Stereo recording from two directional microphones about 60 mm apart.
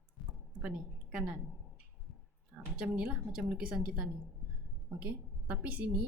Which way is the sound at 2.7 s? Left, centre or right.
Centre.